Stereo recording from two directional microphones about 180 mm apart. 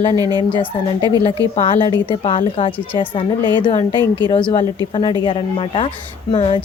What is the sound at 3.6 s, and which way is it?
Speech, 30° left (ahead or behind).